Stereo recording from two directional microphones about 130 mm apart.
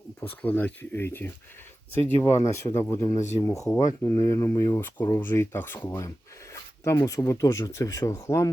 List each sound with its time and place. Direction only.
0.2 s speech: 15° left (ahead or behind)